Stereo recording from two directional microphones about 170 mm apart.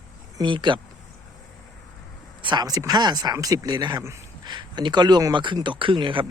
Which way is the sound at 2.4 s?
25° right (ahead or behind).